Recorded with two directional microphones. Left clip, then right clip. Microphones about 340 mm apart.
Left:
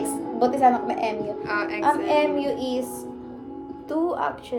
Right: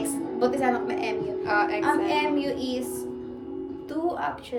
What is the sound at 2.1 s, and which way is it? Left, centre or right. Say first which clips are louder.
Speech: left 4 dB; centre.